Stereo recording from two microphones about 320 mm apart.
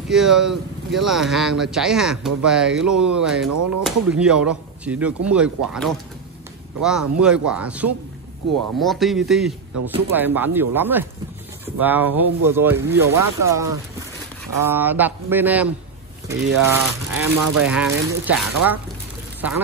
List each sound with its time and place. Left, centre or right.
0.1 s speech: centre
3.4 s speech: right
3.8 s speech: centre